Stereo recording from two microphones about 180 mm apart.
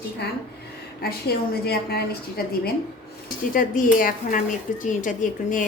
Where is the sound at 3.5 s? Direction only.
50° left (ahead or behind).